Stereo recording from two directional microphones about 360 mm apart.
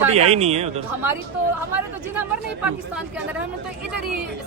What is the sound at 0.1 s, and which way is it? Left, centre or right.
Speech, centre.